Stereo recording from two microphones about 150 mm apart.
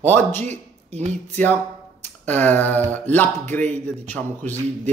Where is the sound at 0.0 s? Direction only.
15° left (ahead or behind).